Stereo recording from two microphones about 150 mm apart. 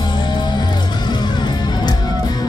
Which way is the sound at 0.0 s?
30° left (ahead or behind).